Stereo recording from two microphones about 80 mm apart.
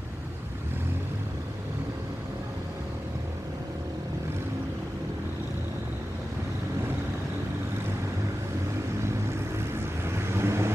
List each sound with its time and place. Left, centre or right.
10.1 s vehicle: right